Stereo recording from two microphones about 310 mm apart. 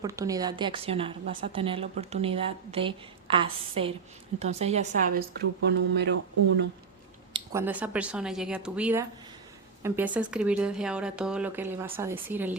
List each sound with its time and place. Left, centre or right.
0.0 s a woman's voice: centre; by 6.1 s right
7.3 s speech: centre